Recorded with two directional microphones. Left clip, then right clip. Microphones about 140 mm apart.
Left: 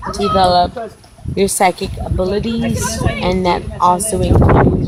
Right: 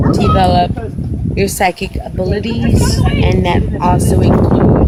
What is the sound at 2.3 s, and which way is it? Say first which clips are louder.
Speech: right 1 dB; 55° left (ahead or behind).